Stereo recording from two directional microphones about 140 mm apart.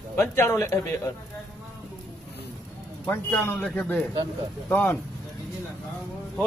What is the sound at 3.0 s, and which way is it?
Speech, 10° left (ahead or behind).